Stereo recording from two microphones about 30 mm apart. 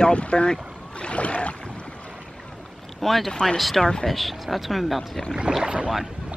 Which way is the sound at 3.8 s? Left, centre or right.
Left.